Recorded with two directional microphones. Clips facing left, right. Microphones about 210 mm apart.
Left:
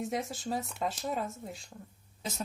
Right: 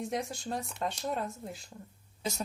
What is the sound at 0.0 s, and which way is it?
A woman's voice, centre (ahead or behind).